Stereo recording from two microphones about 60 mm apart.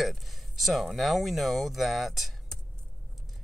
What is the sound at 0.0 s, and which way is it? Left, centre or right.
Speech, centre.